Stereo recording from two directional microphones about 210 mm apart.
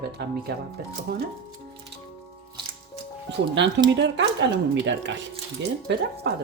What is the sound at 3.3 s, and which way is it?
Speech, 55° right (ahead or behind).